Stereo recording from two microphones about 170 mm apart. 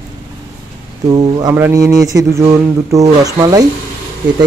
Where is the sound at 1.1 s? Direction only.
25° right (ahead or behind).